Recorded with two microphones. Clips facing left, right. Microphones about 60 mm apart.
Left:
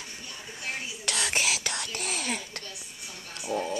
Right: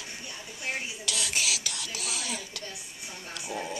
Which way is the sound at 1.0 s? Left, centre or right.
Left.